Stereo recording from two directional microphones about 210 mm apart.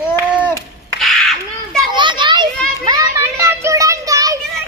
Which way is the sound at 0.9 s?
Centre (ahead or behind).